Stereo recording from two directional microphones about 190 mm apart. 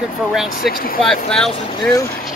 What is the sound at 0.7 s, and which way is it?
Speech, 50° left (ahead or behind).